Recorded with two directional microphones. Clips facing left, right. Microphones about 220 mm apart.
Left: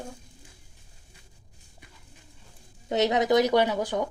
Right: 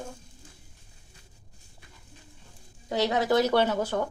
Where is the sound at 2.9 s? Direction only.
20° left (ahead or behind).